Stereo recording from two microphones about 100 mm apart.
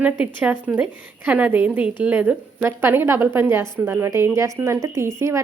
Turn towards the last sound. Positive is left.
turn(degrees=-30)  # may be behind; listen again after turning